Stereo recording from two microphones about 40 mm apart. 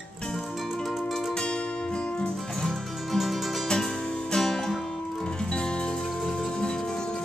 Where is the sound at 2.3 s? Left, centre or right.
Centre.